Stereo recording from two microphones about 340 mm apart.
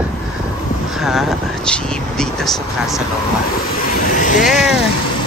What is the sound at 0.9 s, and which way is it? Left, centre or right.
Speech, centre.